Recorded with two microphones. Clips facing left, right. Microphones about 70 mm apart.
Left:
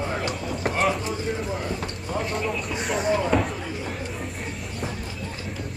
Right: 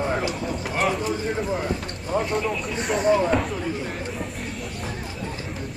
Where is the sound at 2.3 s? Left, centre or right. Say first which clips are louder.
Right 2 dB; centre.